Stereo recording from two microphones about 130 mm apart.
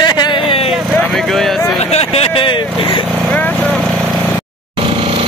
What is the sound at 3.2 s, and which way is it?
Vehicle, 10° left (ahead or behind).